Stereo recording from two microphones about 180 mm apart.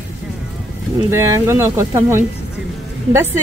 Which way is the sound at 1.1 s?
15° right (ahead or behind).